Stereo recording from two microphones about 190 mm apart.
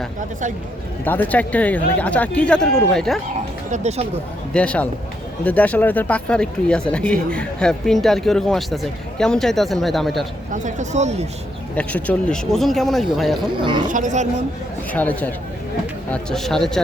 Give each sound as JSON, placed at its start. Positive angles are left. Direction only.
{"t": 1.0, "sound": "speech", "side_deg": 10}
{"t": 3.7, "sound": "speech", "side_deg": -35}
{"t": 4.5, "sound": "speech", "side_deg": 5}
{"t": 10.5, "sound": "speech", "side_deg": -40}
{"t": 11.8, "sound": "speech", "side_deg": 5}
{"t": 13.6, "sound": "speech", "side_deg": -25}
{"t": 13.8, "sound": "speech", "side_deg": -40}
{"t": 14.9, "sound": "speech", "side_deg": 10}